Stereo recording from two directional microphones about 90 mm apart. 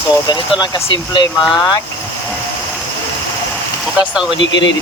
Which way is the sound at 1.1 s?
55° left (ahead or behind).